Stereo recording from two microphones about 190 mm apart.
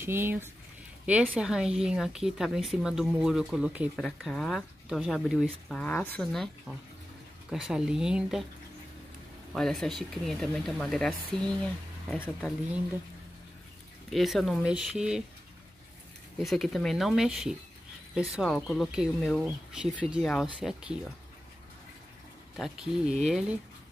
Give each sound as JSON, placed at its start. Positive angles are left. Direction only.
{"t": 0.0, "sound": "speech", "side_deg": -10}
{"t": 7.5, "sound": "speech", "side_deg": -5}
{"t": 9.5, "sound": "speech", "side_deg": 0}
{"t": 14.1, "sound": "speech", "side_deg": 0}
{"t": 16.3, "sound": "speech", "side_deg": 0}
{"t": 18.8, "sound": "speech", "side_deg": 0}
{"t": 22.6, "sound": "speech", "side_deg": 0}